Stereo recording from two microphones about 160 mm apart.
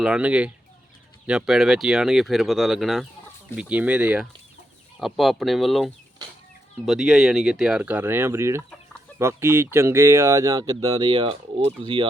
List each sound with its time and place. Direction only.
0.0 s speech: 5° right (ahead or behind); by 11.7 s 35° right (ahead or behind)